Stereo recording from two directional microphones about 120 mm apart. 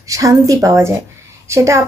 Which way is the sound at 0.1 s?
30° right (ahead or behind).